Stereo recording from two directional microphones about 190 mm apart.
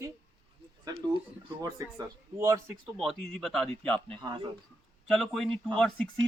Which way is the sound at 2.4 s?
15° right (ahead or behind).